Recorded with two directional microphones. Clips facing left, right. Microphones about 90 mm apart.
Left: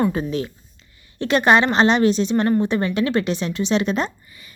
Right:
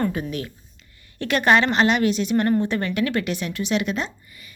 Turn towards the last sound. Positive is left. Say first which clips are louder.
# left 4 dB
turn(degrees=35)  # may be behind; listen again after turning